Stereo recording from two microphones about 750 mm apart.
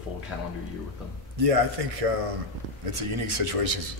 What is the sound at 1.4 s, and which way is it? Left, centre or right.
A man's voice, right.